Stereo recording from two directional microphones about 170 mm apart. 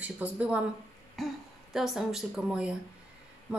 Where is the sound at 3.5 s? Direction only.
5° right (ahead or behind).